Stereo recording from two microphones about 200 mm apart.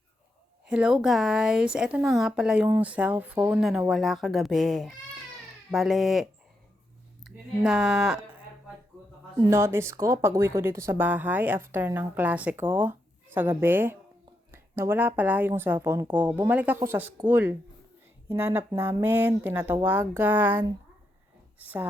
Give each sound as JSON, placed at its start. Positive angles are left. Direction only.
{"t": 0.6, "sound": "speech", "side_deg": -5}
{"t": 7.3, "sound": "speech", "side_deg": -5}
{"t": 9.4, "sound": "speech", "side_deg": -15}